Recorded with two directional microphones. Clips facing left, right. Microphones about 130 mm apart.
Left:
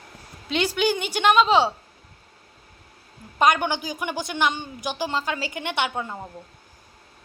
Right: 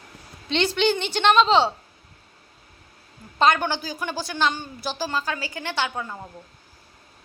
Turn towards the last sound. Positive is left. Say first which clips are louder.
# left 1 dB
turn(degrees=20)  # may be behind; listen again after turning